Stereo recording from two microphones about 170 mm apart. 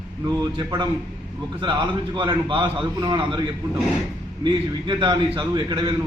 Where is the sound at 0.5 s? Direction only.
30° right (ahead or behind).